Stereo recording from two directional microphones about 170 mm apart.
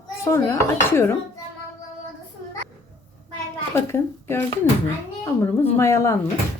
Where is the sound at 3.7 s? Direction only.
15° left (ahead or behind).